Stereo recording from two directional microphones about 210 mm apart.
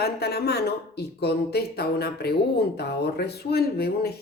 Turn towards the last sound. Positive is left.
turn(degrees=50)  # may be behind; listen again after turning